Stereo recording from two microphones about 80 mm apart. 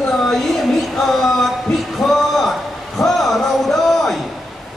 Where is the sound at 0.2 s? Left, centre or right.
Centre.